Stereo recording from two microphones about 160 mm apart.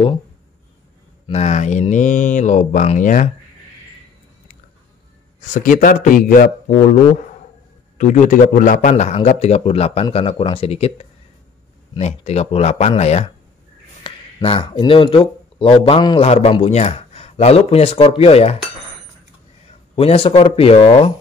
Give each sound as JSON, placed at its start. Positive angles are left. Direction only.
{"t": 1.3, "sound": "a man's voice", "side_deg": 45}
{"t": 5.5, "sound": "a man's voice", "side_deg": 55}
{"t": 8.0, "sound": "a man's voice", "side_deg": 50}
{"t": 20.0, "sound": "a man's voice", "side_deg": 35}